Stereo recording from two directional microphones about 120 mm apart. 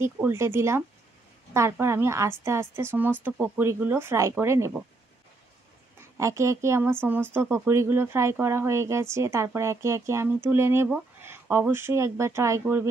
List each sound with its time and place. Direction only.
0.0 s speech: 20° right (ahead or behind)
6.1 s speech: 25° right (ahead or behind)